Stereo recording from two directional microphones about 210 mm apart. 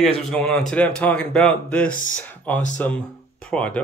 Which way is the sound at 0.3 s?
5° left (ahead or behind).